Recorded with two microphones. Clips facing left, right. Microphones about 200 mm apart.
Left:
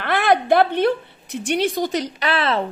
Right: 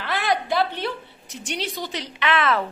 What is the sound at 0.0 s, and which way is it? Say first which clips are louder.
A woman's voice: left 6 dB; 55° left (ahead or behind).